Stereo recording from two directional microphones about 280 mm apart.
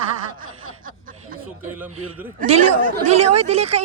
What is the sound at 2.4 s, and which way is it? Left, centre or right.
Speech, right.